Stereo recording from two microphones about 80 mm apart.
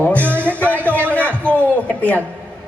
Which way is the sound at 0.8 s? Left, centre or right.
Right.